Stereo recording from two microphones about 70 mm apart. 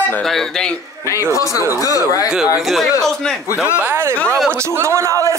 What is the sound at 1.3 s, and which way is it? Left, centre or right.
Speech, left.